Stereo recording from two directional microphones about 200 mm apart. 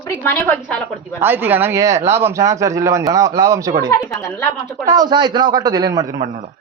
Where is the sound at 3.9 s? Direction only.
15° left (ahead or behind).